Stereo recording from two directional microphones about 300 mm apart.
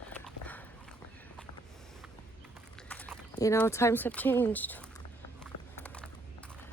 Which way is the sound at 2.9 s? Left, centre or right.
Centre.